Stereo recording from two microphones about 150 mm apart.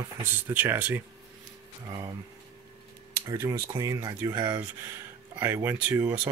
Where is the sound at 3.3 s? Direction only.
20° right (ahead or behind).